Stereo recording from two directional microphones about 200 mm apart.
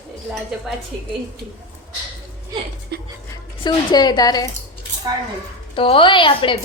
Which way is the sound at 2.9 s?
55° right (ahead or behind).